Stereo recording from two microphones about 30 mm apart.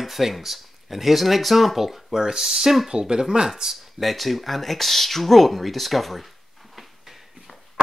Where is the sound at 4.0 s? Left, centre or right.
Centre.